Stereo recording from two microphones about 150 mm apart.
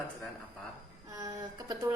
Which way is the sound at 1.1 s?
20° right (ahead or behind).